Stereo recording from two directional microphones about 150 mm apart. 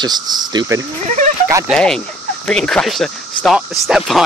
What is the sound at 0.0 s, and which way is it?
Speech, 25° right (ahead or behind).